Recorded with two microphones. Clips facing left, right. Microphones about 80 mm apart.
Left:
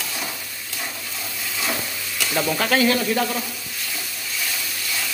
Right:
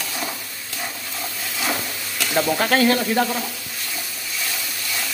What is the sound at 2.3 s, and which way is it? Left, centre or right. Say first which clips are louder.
Speech: right 3 dB; centre.